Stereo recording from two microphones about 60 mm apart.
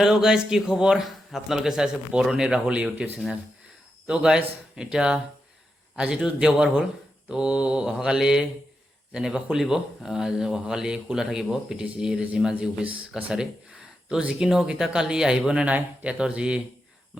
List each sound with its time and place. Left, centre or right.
0.0 s a man's voice: centre
15.6 s a man's voice: right